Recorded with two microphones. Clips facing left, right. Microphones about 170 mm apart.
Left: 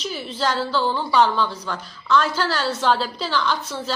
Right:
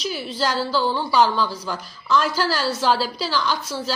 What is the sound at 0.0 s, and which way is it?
A woman's voice, 5° right (ahead or behind).